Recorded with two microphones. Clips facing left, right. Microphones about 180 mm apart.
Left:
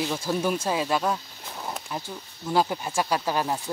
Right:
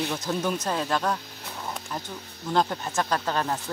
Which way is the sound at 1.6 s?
5° left (ahead or behind).